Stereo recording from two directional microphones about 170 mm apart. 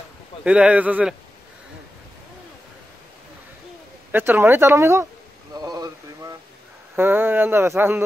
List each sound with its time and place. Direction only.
0.4 s speech: 5° right (ahead or behind)
4.1 s speech: 10° right (ahead or behind)
5.5 s a sound: 20° right (ahead or behind)
7.0 s speech: 10° right (ahead or behind)